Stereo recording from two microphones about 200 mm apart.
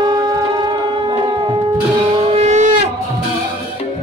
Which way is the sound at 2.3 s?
35° right (ahead or behind).